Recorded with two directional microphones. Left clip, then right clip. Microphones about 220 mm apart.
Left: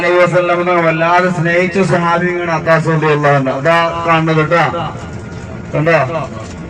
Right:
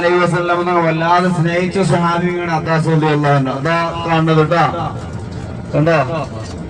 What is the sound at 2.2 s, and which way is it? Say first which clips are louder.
A man's voice: left 4 dB; centre (ahead or behind).